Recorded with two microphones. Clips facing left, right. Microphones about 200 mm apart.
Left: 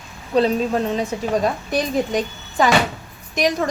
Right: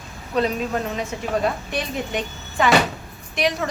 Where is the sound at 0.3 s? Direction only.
30° left (ahead or behind).